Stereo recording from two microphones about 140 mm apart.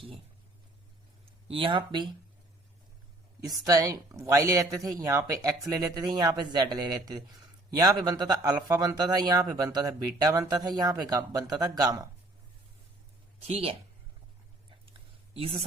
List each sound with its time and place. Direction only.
1.2 s speech: 40° right (ahead or behind)
3.4 s speech: 25° right (ahead or behind)
13.5 s a woman's voice: 45° right (ahead or behind)
15.3 s speech: 45° right (ahead or behind)